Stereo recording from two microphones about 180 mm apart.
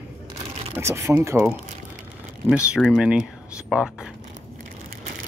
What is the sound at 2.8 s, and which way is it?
Speech, 5° right (ahead or behind).